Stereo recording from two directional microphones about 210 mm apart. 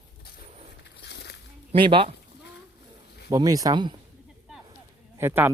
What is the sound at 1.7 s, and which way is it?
Speech, 25° right (ahead or behind).